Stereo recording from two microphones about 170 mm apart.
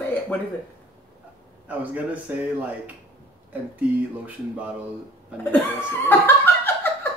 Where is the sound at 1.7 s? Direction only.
10° right (ahead or behind).